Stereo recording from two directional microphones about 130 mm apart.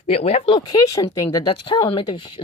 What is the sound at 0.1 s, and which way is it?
Speech, 55° left (ahead or behind).